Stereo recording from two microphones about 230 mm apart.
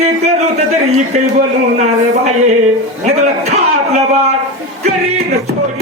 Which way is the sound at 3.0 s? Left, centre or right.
Right.